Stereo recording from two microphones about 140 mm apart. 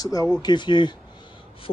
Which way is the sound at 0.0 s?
25° left (ahead or behind).